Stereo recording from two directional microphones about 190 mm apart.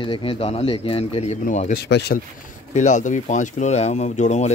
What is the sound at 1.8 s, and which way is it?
Speech, 60° left (ahead or behind).